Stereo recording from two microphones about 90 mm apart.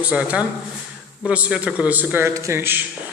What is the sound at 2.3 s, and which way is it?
Speech, 35° right (ahead or behind).